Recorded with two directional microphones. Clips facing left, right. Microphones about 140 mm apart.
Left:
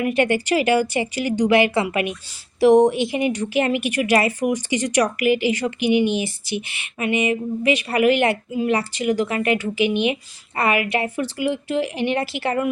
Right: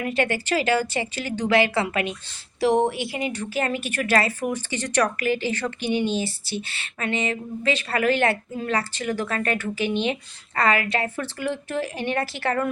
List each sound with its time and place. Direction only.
0.0 s speech: 15° left (ahead or behind)